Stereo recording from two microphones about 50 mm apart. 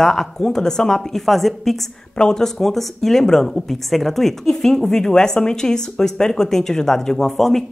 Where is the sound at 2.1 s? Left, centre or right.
Centre.